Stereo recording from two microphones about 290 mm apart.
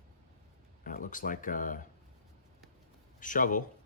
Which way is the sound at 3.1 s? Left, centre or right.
Left.